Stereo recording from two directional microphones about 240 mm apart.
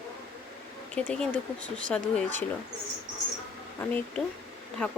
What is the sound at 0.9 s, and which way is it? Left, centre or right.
Speech, centre.